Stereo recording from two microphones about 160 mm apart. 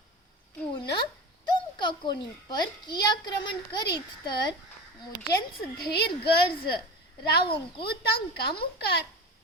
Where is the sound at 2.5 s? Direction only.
25° left (ahead or behind).